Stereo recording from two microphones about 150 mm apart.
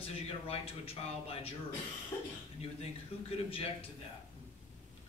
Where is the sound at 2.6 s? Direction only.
40° left (ahead or behind).